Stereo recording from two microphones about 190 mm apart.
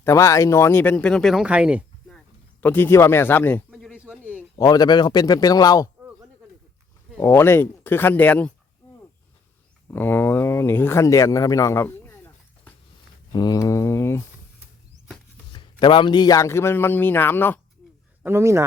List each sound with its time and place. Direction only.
0.0 s speech: 15° left (ahead or behind)
3.9 s a sound: 5° right (ahead or behind)
4.5 s speech: 20° left (ahead or behind)
7.2 s a man's voice: 10° left (ahead or behind)
9.9 s a man's voice: 10° left (ahead or behind)
15.5 s a man's voice: 25° left (ahead or behind)
18.2 s speech: 15° right (ahead or behind)